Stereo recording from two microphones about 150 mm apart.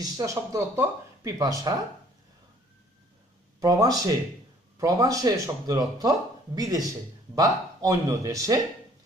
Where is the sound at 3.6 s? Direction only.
25° right (ahead or behind).